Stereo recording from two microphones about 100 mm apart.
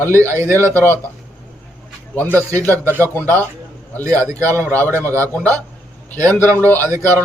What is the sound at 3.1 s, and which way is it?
Speech, 20° left (ahead or behind).